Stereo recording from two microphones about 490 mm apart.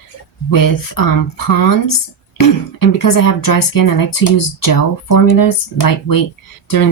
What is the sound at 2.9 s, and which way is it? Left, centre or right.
Speech, left.